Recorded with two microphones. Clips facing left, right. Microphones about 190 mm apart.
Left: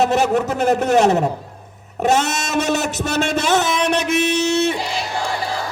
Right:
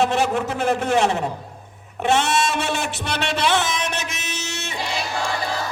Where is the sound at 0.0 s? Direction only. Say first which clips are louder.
Left 4 dB; 40° left (ahead or behind).